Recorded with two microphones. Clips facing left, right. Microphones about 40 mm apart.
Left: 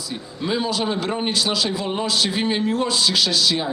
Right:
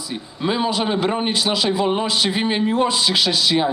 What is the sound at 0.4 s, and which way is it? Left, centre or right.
A man's voice, right.